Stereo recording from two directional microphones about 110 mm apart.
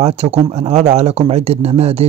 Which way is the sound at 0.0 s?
70° right (ahead or behind).